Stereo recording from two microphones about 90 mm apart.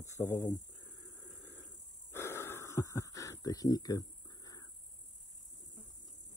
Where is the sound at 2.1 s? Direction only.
25° left (ahead or behind); by 4.6 s 45° left (ahead or behind).